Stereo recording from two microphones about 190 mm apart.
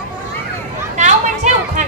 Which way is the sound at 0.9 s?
40° right (ahead or behind).